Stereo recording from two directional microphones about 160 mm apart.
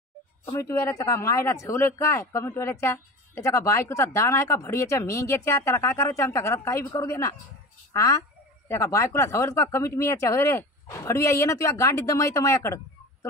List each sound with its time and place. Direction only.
0.5 s speech: 20° left (ahead or behind)